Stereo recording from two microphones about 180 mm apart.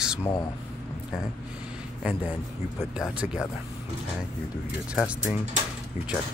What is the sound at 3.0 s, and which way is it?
Speech, 5° right (ahead or behind).